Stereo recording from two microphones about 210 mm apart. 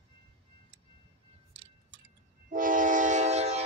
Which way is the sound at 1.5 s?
60° right (ahead or behind).